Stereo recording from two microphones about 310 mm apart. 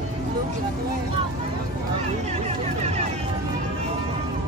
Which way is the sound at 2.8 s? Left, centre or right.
Right.